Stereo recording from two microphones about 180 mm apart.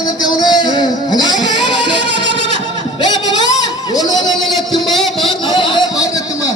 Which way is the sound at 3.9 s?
20° left (ahead or behind).